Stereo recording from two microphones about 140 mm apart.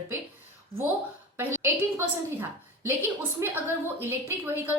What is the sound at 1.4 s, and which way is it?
A woman's voice, 15° right (ahead or behind).